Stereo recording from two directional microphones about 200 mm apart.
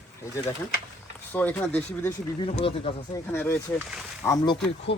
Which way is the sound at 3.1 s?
10° left (ahead or behind).